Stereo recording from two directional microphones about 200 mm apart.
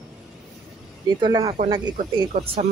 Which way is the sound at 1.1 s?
20° right (ahead or behind).